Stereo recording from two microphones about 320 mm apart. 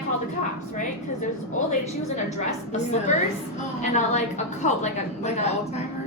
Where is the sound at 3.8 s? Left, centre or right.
Left.